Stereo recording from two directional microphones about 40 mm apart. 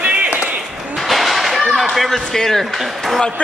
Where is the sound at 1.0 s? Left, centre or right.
Centre.